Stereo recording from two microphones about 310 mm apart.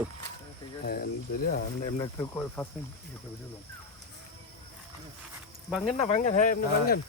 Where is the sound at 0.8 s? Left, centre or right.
Left.